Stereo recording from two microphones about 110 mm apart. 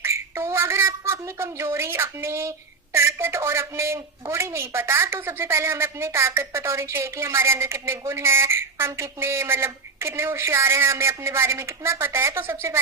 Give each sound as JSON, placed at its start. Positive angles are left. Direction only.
{"t": 0.0, "sound": "a woman's voice", "side_deg": -25}